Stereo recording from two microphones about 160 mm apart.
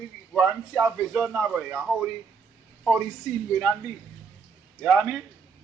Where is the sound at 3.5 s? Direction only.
Centre (ahead or behind).